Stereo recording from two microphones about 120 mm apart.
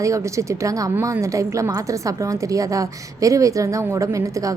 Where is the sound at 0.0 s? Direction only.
25° right (ahead or behind).